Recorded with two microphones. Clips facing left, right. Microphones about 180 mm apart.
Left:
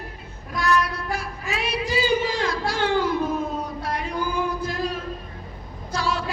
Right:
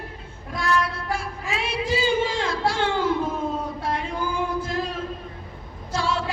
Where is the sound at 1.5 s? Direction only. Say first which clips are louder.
Even; 25° right (ahead or behind).